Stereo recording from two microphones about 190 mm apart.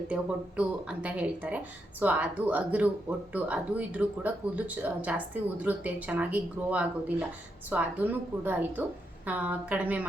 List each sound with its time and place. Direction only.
0.1 s speech: 5° right (ahead or behind)